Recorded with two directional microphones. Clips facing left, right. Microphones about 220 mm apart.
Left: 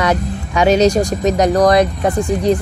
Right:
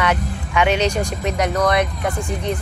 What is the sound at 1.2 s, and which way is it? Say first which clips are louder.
Speech: left 7 dB; 35° left (ahead or behind).